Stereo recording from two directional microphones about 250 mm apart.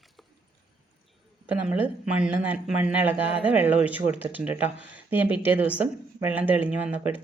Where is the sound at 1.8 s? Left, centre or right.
Centre.